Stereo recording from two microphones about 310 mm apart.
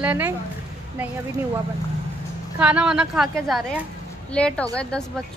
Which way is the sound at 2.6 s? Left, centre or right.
Centre.